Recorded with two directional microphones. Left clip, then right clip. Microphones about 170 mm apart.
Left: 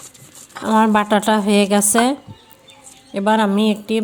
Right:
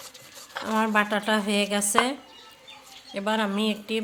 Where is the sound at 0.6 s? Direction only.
30° left (ahead or behind).